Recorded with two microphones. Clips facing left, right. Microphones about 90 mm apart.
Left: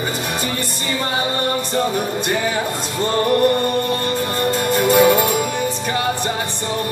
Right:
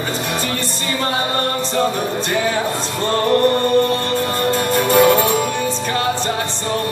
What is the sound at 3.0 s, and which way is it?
Music, 10° left (ahead or behind).